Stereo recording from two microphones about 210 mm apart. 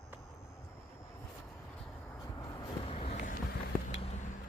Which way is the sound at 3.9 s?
30° left (ahead or behind).